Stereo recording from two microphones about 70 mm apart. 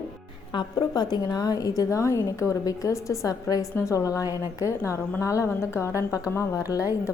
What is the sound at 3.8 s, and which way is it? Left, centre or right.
A woman's voice, left.